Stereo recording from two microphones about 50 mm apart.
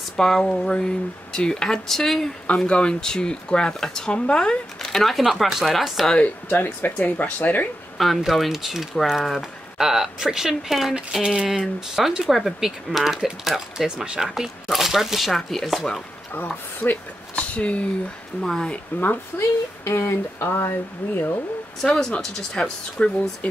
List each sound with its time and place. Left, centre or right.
0.2 s speech: centre
2.4 s speech: left; by 6.0 s centre
6.1 s speech: left
8.2 s speech: centre
14.0 s speech: centre
14.3 s speech: centre
16.8 s speech: left
18.4 s speech: centre
18.9 s speech: left
19.8 s speech: left
21.8 s speech: centre